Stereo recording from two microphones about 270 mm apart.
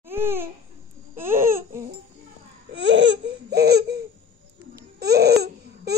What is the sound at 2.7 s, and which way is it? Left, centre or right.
Laughter, right.